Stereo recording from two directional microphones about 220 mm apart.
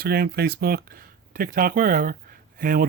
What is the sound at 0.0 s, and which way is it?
Speech, 45° right (ahead or behind).